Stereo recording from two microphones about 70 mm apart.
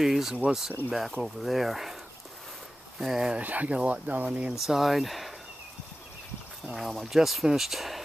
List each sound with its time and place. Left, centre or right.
0.0 s speech: centre
3.0 s speech: centre
4.6 s speech: centre
6.7 s speech: centre